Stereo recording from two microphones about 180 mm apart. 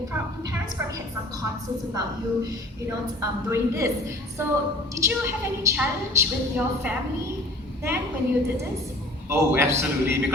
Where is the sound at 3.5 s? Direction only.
15° right (ahead or behind).